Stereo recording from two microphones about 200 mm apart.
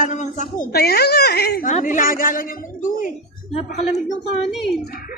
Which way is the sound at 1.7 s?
40° left (ahead or behind).